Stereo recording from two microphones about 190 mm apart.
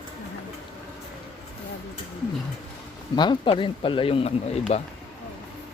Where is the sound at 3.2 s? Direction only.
25° left (ahead or behind).